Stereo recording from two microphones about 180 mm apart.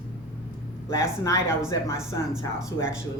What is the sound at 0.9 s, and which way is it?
Speech, 15° left (ahead or behind).